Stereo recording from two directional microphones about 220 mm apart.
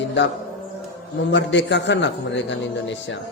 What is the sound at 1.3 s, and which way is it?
A man's voice, 55° left (ahead or behind).